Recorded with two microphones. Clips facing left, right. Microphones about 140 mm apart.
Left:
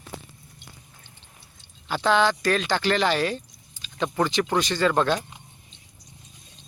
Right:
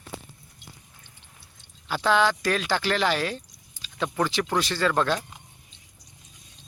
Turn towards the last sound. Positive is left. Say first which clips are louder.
# left 2 dB
turn(degrees=0)  # may be behind; listen again after turning